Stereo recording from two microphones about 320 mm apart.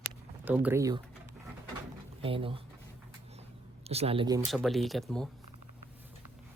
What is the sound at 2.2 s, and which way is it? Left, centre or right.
Speech, centre.